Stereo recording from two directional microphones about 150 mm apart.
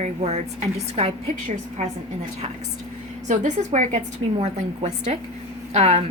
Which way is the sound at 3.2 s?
55° right (ahead or behind).